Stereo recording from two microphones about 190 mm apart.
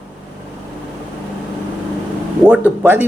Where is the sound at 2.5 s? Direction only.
10° right (ahead or behind).